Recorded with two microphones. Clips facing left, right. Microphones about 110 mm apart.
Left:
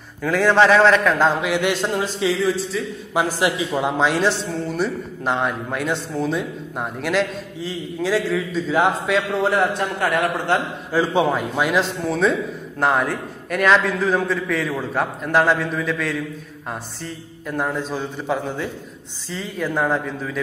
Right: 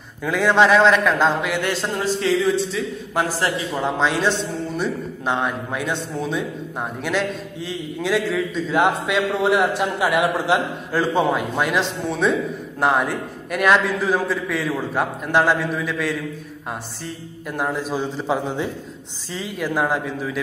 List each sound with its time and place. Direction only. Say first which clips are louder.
0.2 s a man's voice: left 1 dB; 10° right (ahead or behind)
0.7 s a man's voice: left 1 dB; centre (ahead or behind)
10.9 s a man's voice: left 1 dB; 10° left (ahead or behind)
17.5 s a man's voice: even; 10° right (ahead or behind)